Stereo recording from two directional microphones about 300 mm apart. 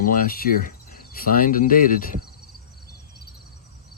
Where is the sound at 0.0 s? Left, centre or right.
Left.